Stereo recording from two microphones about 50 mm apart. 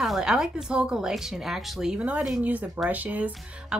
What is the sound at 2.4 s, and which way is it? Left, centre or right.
Speech, right.